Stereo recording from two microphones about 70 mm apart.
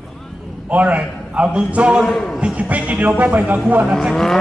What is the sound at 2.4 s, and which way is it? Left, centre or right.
Speech, centre.